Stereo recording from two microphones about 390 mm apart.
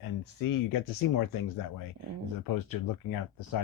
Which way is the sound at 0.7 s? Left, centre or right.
Left.